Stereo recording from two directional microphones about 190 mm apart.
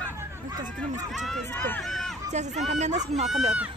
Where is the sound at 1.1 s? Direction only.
Centre (ahead or behind).